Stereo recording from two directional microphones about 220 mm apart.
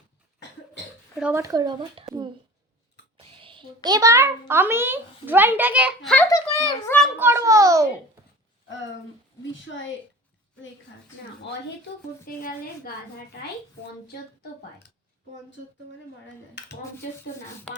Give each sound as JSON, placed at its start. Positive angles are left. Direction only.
{"t": 1.2, "sound": "a child's voice", "side_deg": -10}
{"t": 3.2, "sound": "a sound", "side_deg": -25}
{"t": 3.8, "sound": "a child's voice", "side_deg": -15}
{"t": 6.3, "sound": "a child's voice", "side_deg": 15}
{"t": 7.2, "sound": "a child's voice", "side_deg": -10}
{"t": 12.2, "sound": "a woman's voice", "side_deg": 40}
{"t": 16.6, "sound": "dishes", "side_deg": 50}